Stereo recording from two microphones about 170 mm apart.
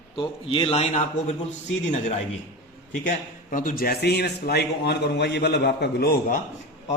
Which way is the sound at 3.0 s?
50° left (ahead or behind).